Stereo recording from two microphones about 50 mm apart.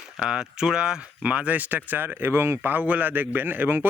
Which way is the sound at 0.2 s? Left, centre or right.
Centre.